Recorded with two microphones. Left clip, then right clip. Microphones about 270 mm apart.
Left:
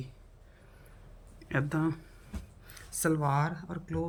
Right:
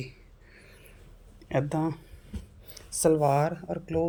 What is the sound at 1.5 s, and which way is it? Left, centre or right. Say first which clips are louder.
Speech: right 3 dB; centre.